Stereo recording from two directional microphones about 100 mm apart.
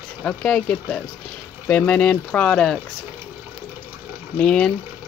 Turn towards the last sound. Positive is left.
turn(degrees=10)  # may be behind; listen again after turning